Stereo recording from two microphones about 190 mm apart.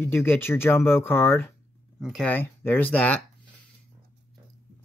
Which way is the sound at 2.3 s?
10° left (ahead or behind).